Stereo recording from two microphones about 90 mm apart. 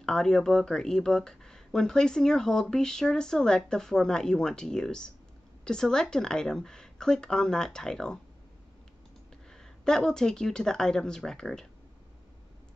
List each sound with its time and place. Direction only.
0.0 s speech: 5° left (ahead or behind)
9.5 s speech: 5° left (ahead or behind)